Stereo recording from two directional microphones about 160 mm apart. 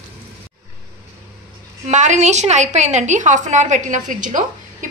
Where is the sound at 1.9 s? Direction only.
50° right (ahead or behind).